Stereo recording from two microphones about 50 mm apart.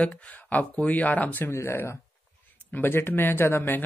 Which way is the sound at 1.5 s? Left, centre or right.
Left.